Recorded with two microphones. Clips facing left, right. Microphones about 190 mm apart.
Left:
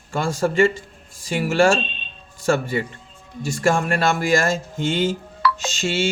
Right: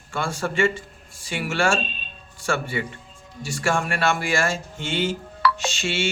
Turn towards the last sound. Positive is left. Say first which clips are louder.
# left 3 dB
turn(degrees=40)  # may be behind; listen again after turning